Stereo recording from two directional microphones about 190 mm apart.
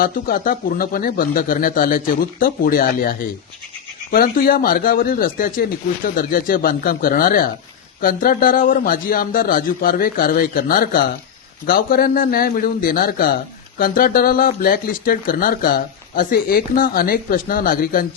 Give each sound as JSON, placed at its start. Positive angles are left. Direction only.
{"t": 0.0, "sound": "a man's voice", "side_deg": 50}